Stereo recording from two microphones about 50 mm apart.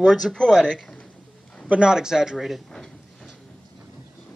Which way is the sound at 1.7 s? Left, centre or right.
Centre.